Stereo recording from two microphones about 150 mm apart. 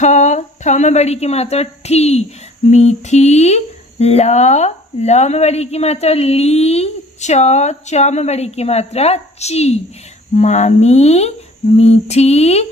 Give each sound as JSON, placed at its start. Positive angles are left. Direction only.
{"t": 0.0, "sound": "a woman's voice", "side_deg": 50}